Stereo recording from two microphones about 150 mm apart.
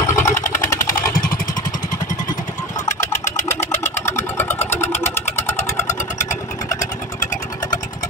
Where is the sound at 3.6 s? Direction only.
15° left (ahead or behind).